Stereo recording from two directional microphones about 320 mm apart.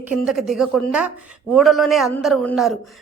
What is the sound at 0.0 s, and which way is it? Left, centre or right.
A man's voice, centre.